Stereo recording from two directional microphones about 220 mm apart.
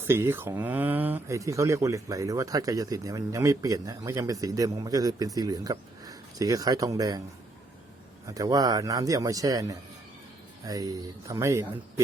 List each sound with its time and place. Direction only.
0.0 s speech: 10° right (ahead or behind)
8.3 s speech: 15° right (ahead or behind)